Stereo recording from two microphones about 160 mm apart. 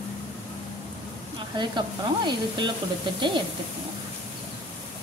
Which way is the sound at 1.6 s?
30° right (ahead or behind).